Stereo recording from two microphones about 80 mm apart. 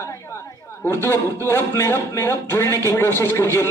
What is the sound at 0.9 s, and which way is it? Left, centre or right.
Speech, left.